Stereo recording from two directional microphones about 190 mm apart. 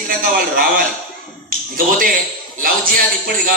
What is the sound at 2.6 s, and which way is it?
Speech, 50° right (ahead or behind).